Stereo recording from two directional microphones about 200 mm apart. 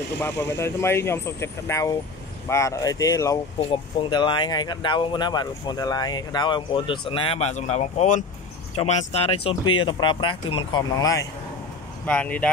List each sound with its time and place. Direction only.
0.2 s speech: 10° left (ahead or behind)
12.1 s speech: 5° left (ahead or behind)